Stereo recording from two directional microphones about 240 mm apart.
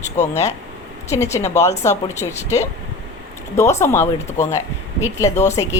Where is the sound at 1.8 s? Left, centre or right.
Centre.